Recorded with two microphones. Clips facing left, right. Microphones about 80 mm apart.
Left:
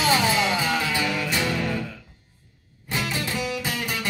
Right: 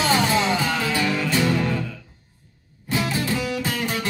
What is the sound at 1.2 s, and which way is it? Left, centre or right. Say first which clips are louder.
Music: right 4 dB; right.